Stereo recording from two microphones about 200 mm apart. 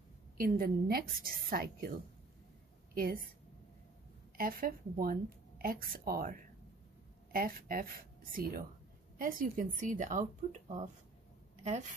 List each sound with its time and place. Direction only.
0.4 s a woman's voice: 45° right (ahead or behind)
2.9 s a sound: 45° right (ahead or behind)
4.4 s a woman's voice: 45° right (ahead or behind)